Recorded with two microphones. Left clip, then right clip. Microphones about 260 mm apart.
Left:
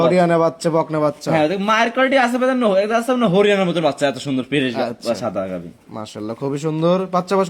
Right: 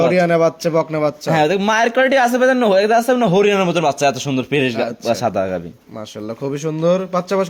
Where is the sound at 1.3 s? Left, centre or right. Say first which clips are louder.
Right 3 dB; right.